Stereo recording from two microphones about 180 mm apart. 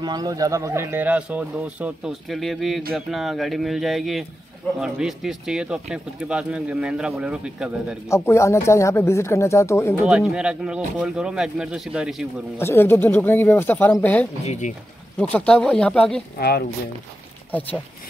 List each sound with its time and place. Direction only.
0.0 s speech: 20° right (ahead or behind); by 8.0 s 5° right (ahead or behind)
8.1 s speech: 15° left (ahead or behind)
10.0 s speech: 5° right (ahead or behind)
12.5 s speech: 15° left (ahead or behind)
14.4 s speech: 40° left (ahead or behind)
15.3 s speech: 5° left (ahead or behind)
16.3 s speech: 60° left (ahead or behind)
17.5 s speech: 10° left (ahead or behind)